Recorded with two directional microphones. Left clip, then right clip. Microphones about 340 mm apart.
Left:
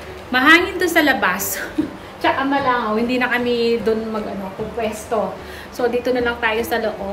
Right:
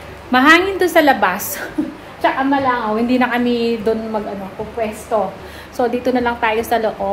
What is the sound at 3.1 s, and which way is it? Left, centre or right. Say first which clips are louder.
Speech: right 2 dB; centre.